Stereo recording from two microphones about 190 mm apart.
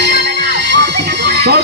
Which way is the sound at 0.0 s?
65° right (ahead or behind).